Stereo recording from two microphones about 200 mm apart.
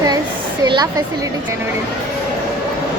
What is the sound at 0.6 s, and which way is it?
Speech, 20° right (ahead or behind).